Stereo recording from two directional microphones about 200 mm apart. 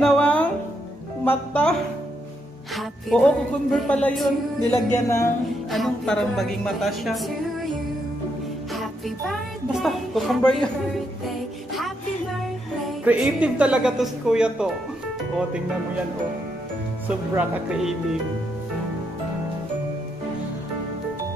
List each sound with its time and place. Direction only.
0.0 s music: 5° left (ahead or behind)
1.2 s a woman's voice: 10° left (ahead or behind)
4.9 s a sound: 15° left (ahead or behind)
5.7 s a woman's voice: centre (ahead or behind)
8.7 s music: centre (ahead or behind)
13.0 s a woman's voice: 5° right (ahead or behind)
17.4 s a woman's voice: centre (ahead or behind)